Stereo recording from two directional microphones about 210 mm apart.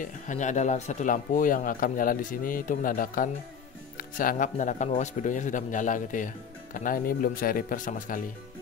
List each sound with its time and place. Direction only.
0.0 s speech: 35° left (ahead or behind)